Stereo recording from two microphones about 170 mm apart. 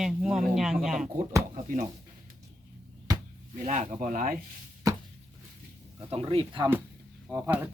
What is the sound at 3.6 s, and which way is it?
Speech, 45° right (ahead or behind).